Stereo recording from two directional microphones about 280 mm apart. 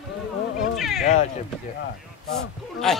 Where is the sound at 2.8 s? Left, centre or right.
Centre.